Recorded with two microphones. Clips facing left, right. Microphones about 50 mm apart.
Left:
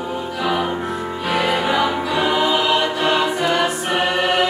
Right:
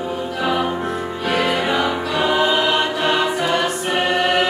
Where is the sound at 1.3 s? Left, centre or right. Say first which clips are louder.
Even; centre.